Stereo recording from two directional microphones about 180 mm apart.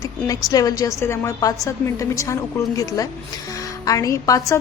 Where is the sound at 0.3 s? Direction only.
20° left (ahead or behind).